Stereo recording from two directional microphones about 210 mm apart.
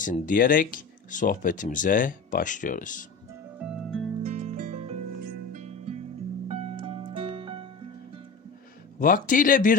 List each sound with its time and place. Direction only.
0.0 s speech: 40° left (ahead or behind)
3.6 s music: 5° right (ahead or behind)
4.2 s music: 35° right (ahead or behind)
5.2 s music: 45° right (ahead or behind); by 7.7 s 25° right (ahead or behind)
9.0 s speech: 40° left (ahead or behind)